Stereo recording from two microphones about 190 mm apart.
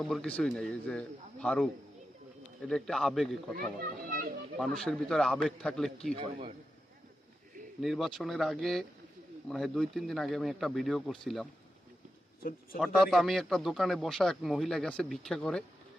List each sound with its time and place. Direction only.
0.0 s a man's voice: centre (ahead or behind)
3.8 s a child's voice: 50° right (ahead or behind)
4.6 s a man's voice: centre (ahead or behind)
7.8 s a man's voice: centre (ahead or behind)
12.8 s a man's voice: centre (ahead or behind)